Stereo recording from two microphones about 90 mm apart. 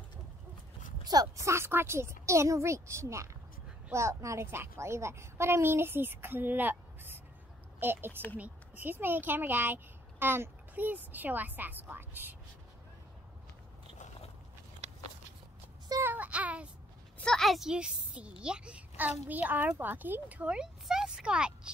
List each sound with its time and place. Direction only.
1.0 s a child's voice: 45° right (ahead or behind); by 12.4 s 20° right (ahead or behind)
16.0 s child singing: 20° right (ahead or behind)
17.2 s a child's voice: 5° left (ahead or behind); by 20.6 s 15° right (ahead or behind)
20.8 s a sound: 5° right (ahead or behind)